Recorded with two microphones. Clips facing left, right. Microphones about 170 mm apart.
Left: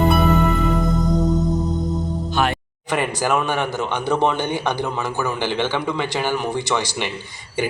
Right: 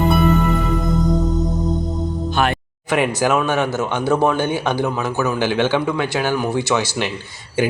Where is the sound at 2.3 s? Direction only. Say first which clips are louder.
Right 2 dB; 60° right (ahead or behind).